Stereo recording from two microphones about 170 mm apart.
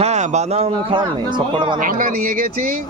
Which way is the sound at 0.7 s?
25° right (ahead or behind).